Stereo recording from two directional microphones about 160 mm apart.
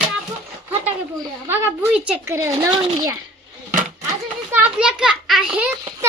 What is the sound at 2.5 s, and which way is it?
Speech, 35° right (ahead or behind).